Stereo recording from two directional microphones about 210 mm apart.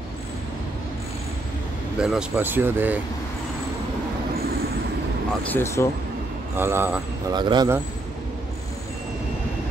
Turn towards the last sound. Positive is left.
turn(degrees=-20)  # may be behind; listen again after turning